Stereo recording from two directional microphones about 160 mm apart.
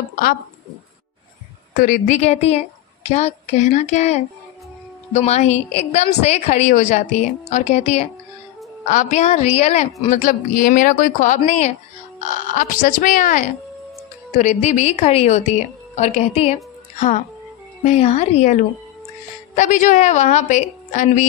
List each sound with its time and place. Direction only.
1.8 s a woman's voice: 55° left (ahead or behind)
12.5 s a woman's voice: 55° left (ahead or behind)
17.8 s a woman's voice: 45° left (ahead or behind)